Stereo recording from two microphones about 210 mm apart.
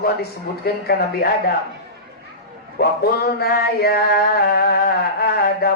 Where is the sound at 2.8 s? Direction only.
50° left (ahead or behind).